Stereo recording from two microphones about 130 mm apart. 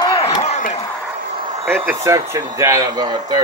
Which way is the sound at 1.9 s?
25° right (ahead or behind).